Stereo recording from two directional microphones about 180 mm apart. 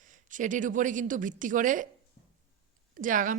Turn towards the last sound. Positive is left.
turn(degrees=-45)  # may be behind; listen again after turning